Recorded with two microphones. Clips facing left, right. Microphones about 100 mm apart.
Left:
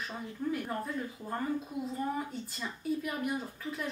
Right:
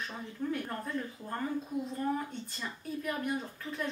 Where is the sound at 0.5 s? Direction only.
5° left (ahead or behind).